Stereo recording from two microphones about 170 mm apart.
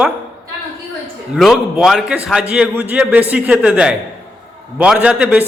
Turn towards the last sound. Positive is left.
turn(degrees=-5)  # may be behind; listen again after turning